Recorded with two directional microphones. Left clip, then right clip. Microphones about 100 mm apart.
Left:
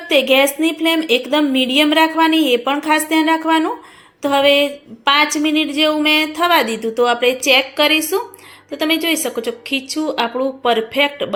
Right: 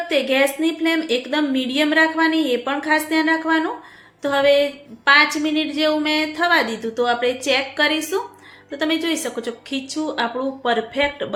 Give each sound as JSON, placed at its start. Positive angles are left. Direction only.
{"t": 0.1, "sound": "a woman's voice", "side_deg": 35}